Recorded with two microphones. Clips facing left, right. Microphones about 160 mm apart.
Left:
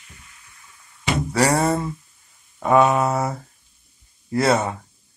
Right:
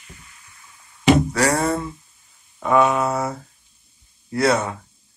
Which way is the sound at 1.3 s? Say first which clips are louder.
Left 1 dB; 25° left (ahead or behind).